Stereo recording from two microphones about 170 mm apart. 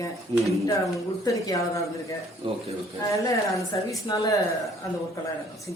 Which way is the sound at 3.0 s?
20° left (ahead or behind).